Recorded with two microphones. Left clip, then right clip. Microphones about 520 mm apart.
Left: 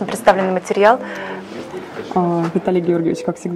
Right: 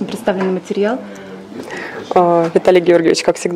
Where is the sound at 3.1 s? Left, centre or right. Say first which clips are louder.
Right 8 dB; right.